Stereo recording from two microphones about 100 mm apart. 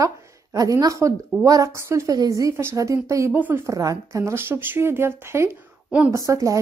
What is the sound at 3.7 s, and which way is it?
Speech, 35° right (ahead or behind).